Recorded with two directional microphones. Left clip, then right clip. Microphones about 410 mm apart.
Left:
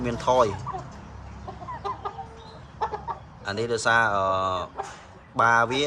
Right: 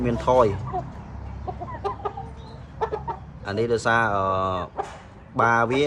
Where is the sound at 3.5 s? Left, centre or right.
Centre.